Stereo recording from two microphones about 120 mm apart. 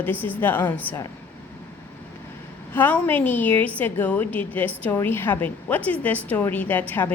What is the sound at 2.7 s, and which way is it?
A woman's voice, 15° left (ahead or behind).